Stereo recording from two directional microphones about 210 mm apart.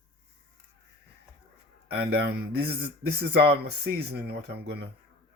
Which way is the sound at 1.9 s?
50° right (ahead or behind).